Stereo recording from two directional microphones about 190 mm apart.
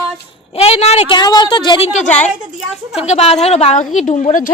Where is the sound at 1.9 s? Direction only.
40° left (ahead or behind).